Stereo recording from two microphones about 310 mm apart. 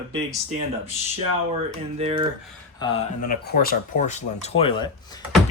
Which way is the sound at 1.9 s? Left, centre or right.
Centre.